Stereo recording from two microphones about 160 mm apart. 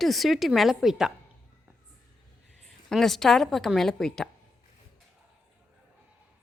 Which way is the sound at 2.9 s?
Centre (ahead or behind).